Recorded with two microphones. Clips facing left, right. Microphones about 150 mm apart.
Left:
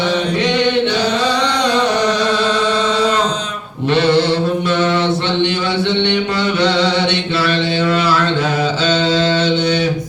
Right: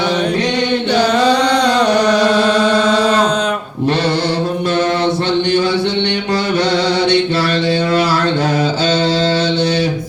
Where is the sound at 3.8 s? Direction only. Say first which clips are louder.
Left 3 dB; 40° right (ahead or behind).